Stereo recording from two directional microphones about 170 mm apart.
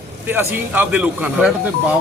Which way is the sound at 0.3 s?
10° right (ahead or behind).